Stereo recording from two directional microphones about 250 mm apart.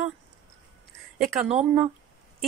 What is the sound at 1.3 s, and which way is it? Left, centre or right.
Speech, right.